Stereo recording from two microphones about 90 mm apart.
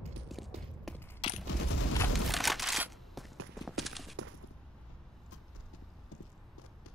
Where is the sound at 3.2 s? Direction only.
Centre (ahead or behind).